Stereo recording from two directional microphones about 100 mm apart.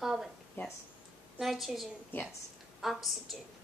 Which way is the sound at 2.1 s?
20° left (ahead or behind).